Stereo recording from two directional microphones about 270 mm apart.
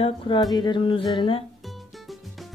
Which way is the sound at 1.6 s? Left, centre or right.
Centre.